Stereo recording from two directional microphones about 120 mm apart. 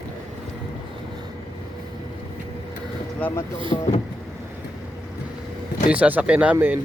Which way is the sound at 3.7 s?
50° left (ahead or behind).